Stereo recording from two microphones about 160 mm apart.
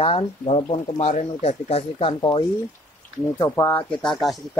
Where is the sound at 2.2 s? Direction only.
25° left (ahead or behind).